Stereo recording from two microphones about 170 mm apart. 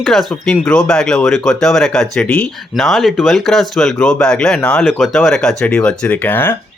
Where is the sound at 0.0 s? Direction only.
Centre (ahead or behind).